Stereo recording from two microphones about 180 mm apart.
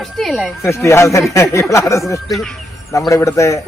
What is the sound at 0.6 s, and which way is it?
A man's voice, 15° left (ahead or behind).